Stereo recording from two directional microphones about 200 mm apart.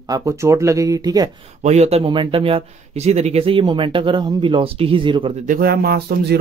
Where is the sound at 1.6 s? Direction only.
35° right (ahead or behind).